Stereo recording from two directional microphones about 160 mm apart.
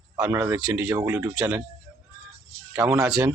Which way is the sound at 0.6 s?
5° right (ahead or behind).